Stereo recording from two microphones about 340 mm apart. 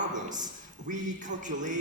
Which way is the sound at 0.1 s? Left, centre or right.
Right.